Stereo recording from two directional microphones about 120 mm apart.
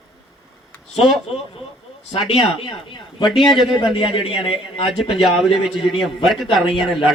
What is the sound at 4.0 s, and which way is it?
Speech, 50° left (ahead or behind).